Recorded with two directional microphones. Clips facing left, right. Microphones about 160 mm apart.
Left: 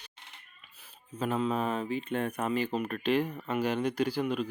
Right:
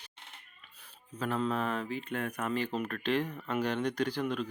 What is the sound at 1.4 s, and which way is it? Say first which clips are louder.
Speech: left 2 dB; 15° left (ahead or behind).